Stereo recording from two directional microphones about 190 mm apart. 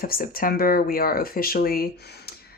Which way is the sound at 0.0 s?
50° left (ahead or behind).